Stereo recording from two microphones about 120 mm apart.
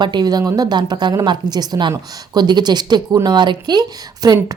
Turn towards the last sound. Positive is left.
turn(degrees=-30)  # may be behind; listen again after turning